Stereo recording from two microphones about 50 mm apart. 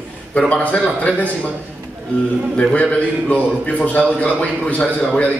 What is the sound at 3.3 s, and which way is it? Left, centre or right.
A man's voice, left.